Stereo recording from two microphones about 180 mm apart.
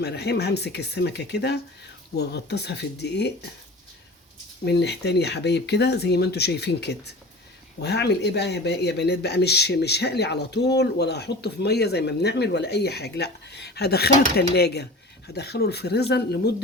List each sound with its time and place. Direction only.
0.0 s speech: 65° left (ahead or behind)
4.6 s speech: 70° left (ahead or behind)